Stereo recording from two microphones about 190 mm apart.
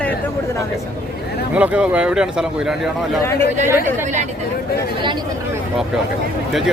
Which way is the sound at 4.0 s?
40° right (ahead or behind).